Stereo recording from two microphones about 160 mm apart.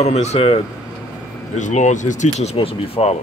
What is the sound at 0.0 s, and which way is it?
Speech, 45° left (ahead or behind).